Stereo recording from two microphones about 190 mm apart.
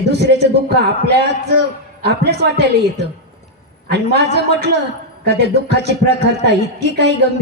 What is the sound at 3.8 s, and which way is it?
A man's voice, 60° right (ahead or behind).